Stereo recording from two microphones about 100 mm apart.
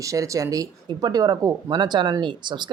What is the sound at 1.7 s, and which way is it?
Speech, 50° right (ahead or behind).